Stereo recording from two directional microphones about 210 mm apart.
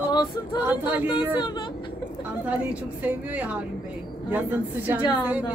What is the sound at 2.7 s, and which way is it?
Speech, 5° right (ahead or behind).